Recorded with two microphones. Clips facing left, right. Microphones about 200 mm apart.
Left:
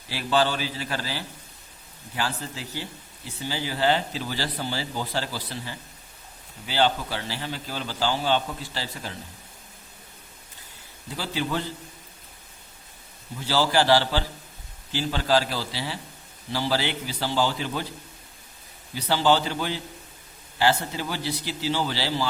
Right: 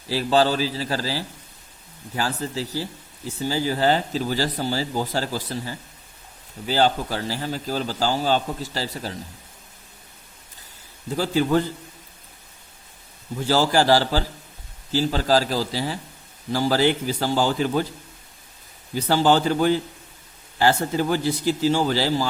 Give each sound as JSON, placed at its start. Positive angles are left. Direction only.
{"t": 0.1, "sound": "a man's voice", "side_deg": -40}
{"t": 11.2, "sound": "speech", "side_deg": -45}
{"t": 13.3, "sound": "a man's voice", "side_deg": -45}
{"t": 18.9, "sound": "speech", "side_deg": -45}